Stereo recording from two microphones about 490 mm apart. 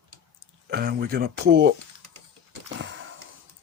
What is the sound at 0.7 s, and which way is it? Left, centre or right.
Speech, centre.